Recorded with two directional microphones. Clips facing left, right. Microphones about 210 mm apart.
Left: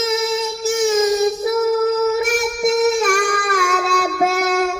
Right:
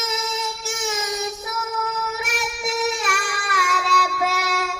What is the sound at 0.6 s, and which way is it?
Child singing, 40° left (ahead or behind).